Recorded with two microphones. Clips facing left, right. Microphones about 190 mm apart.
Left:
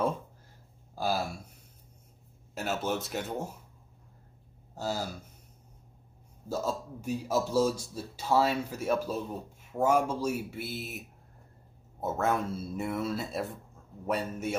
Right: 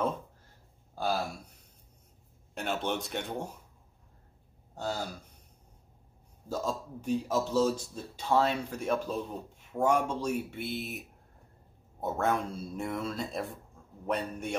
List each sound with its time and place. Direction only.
0.9 s speech: 5° left (ahead or behind)
2.5 s speech: 5° left (ahead or behind)
4.7 s speech: 5° left (ahead or behind)
6.5 s speech: 5° left (ahead or behind)